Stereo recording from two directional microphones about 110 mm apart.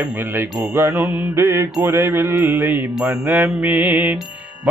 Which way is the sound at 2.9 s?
10° right (ahead or behind).